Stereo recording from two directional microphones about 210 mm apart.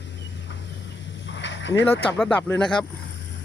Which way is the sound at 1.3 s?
60° left (ahead or behind).